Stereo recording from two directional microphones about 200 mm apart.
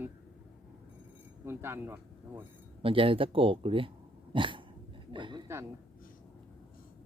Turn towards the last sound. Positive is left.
turn(degrees=-15)  # may be behind; listen again after turning